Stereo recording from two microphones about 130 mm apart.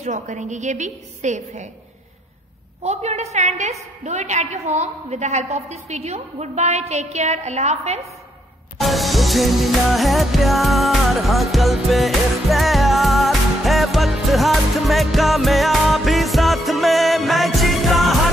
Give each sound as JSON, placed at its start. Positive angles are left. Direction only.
{"t": 0.0, "sound": "a woman's voice", "side_deg": -65}
{"t": 2.8, "sound": "a woman's voice", "side_deg": -60}
{"t": 8.7, "sound": "music", "side_deg": 0}